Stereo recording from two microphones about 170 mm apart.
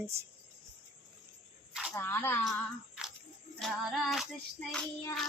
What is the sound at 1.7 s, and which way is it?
Snake, 5° right (ahead or behind).